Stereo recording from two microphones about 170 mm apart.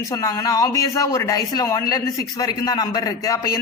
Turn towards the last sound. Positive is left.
turn(degrees=20)  # may be behind; listen again after turning